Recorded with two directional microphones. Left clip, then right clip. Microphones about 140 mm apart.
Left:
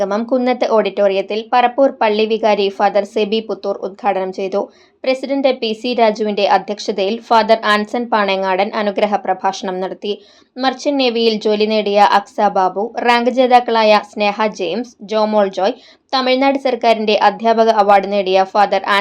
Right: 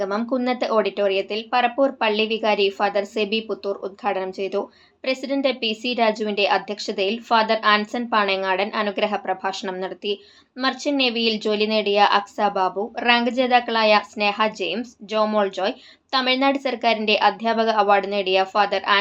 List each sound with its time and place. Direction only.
0.0 s a woman's voice: 45° left (ahead or behind)